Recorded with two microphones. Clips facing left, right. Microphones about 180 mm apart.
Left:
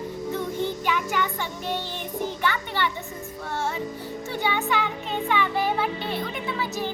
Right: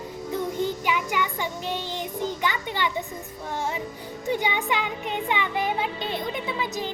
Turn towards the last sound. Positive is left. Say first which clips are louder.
# even
turn(degrees=-20)  # may be behind; listen again after turning